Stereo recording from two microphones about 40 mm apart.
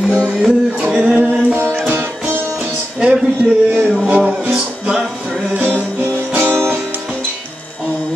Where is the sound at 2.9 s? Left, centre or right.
Right.